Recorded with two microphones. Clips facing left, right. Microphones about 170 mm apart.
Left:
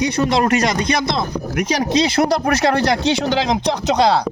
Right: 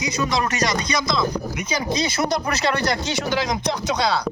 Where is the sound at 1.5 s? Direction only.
90° left; by 3.8 s 75° left (ahead or behind).